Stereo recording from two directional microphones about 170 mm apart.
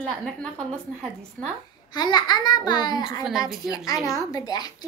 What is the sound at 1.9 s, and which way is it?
Speech, 25° left (ahead or behind).